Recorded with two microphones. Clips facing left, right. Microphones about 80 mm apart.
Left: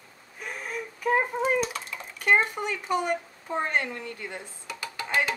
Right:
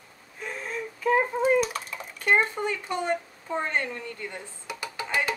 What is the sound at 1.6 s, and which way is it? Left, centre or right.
Cat, centre.